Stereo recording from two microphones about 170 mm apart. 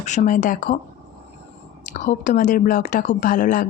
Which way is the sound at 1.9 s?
50° left (ahead or behind).